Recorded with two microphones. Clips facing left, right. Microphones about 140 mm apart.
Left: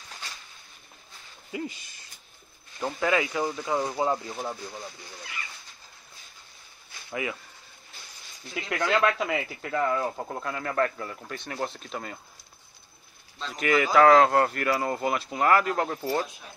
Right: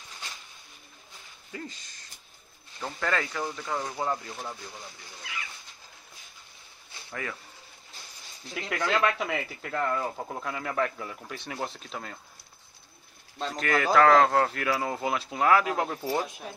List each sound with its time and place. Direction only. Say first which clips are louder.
1.5 s speech: left 6 dB; 10° left (ahead or behind)
7.1 s speech: left 5 dB; 10° left (ahead or behind)
8.5 s speech: left 2 dB; centre (ahead or behind)
13.6 s speech: left 2 dB; 5° left (ahead or behind)